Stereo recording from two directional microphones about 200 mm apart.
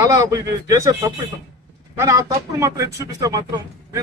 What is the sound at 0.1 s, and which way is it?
A man's voice, 15° right (ahead or behind).